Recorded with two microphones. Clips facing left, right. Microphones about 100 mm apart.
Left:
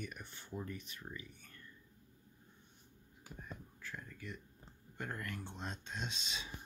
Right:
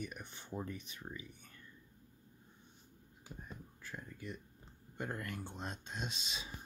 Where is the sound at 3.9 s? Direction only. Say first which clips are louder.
Right 1 dB; 20° right (ahead or behind).